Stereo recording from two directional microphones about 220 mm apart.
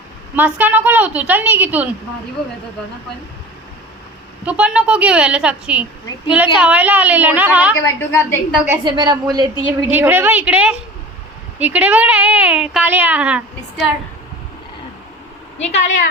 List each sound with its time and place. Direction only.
0.3 s speech: 10° right (ahead or behind)
4.4 s a woman's voice: 5° right (ahead or behind)
7.8 s a woman's voice: 10° left (ahead or behind)
8.8 s a woman's voice: 20° right (ahead or behind)
9.6 s a woman's voice: 20° left (ahead or behind)
9.9 s speech: 10° right (ahead or behind)
15.5 s a woman's voice: 30° left (ahead or behind)